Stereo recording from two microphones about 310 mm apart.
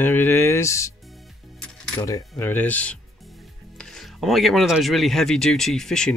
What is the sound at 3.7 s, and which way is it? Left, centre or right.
Speech, centre.